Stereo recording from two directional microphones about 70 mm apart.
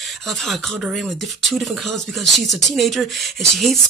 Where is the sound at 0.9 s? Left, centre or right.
Centre.